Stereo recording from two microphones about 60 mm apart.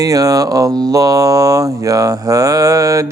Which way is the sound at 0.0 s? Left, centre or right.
Right.